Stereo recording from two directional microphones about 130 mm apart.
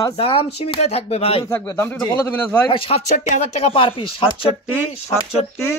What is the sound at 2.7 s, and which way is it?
Speech, 50° left (ahead or behind).